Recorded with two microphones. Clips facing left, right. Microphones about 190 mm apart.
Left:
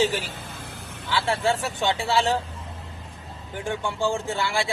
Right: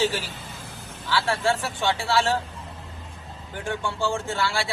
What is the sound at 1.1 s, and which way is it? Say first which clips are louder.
Speech: even; 20° left (ahead or behind).